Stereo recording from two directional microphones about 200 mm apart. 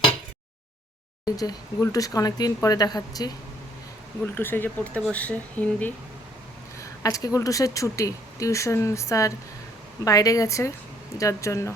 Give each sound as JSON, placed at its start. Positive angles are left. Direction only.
{"t": 1.2, "sound": "speech", "side_deg": 20}